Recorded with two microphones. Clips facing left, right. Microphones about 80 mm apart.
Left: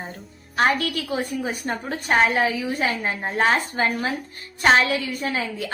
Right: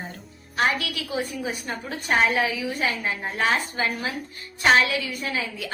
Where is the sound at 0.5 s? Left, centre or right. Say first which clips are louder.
Left 3 dB; left.